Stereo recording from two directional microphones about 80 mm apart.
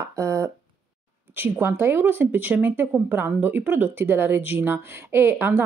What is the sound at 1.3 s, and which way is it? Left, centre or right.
Speech, right.